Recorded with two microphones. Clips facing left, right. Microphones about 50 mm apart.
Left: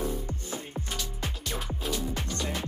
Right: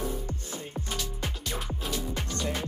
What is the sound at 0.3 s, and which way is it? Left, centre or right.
Music, left.